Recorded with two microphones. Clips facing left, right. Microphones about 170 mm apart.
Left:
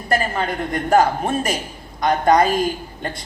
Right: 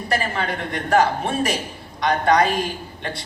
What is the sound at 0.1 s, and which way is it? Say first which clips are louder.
A woman's voice: left 3 dB; 45° left (ahead or behind).